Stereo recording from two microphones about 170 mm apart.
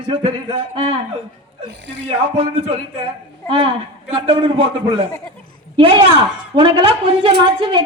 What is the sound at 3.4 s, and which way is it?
A man's voice, 30° right (ahead or behind).